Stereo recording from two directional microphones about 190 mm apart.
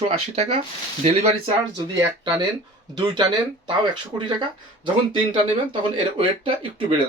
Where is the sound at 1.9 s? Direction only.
20° right (ahead or behind).